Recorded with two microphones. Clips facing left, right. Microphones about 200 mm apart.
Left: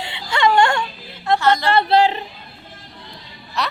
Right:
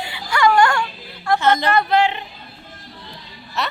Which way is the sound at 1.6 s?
30° left (ahead or behind).